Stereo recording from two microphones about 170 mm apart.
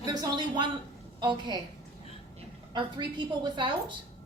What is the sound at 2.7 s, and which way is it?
A woman's voice, 25° right (ahead or behind).